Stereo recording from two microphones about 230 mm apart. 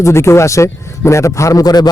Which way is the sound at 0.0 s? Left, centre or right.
Centre.